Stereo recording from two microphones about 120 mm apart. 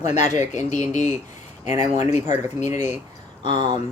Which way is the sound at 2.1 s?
75° left (ahead or behind).